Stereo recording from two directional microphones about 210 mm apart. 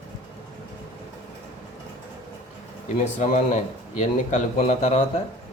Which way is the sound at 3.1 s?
35° left (ahead or behind).